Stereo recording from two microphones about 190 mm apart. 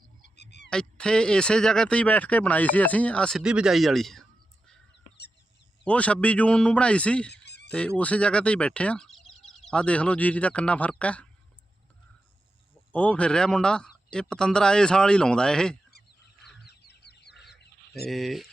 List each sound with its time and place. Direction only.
0.3 s frog: 60° left (ahead or behind)
0.7 s speech: 5° left (ahead or behind)
5.8 s a man's voice: 5° left (ahead or behind)
7.3 s fowl: 60° left (ahead or behind)
7.7 s speech: 5° left (ahead or behind)
12.9 s speech: 5° left (ahead or behind)
16.6 s goose: 60° left (ahead or behind)
18.1 s speech: centre (ahead or behind)